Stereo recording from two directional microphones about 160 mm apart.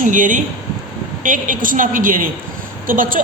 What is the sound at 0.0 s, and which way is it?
A man's voice, 55° right (ahead or behind).